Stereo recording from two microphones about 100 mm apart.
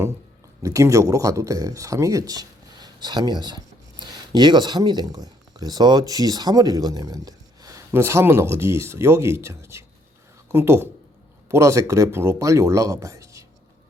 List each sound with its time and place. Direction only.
0.6 s speech: 30° right (ahead or behind)